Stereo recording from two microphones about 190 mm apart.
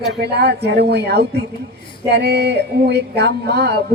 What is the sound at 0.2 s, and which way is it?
A woman's voice, 60° right (ahead or behind).